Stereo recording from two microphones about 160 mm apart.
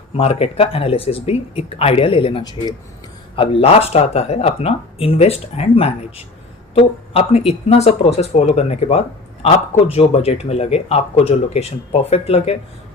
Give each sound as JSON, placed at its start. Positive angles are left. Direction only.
{"t": 0.2, "sound": "speech", "side_deg": 40}